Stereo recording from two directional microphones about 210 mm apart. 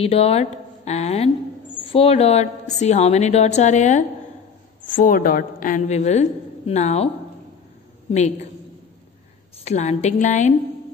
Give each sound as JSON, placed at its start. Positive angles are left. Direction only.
{"t": 0.0, "sound": "a woman's voice", "side_deg": 30}
{"t": 8.1, "sound": "a woman's voice", "side_deg": 35}
{"t": 9.7, "sound": "a woman's voice", "side_deg": 30}